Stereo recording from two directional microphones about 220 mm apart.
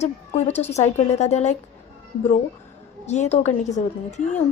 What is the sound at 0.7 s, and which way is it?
Speech, 30° left (ahead or behind).